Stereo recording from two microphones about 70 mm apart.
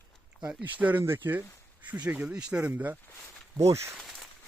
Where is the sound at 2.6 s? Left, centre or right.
Right.